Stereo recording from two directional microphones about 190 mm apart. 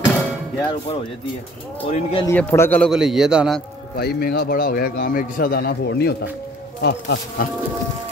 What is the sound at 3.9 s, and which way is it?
A man's voice, 55° left (ahead or behind).